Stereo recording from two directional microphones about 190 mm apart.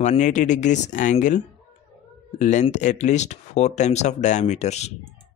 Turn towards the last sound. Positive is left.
turn(degrees=35)  # may be behind; listen again after turning